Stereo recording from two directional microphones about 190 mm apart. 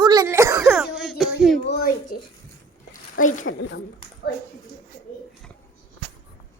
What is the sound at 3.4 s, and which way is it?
Speech, 80° left.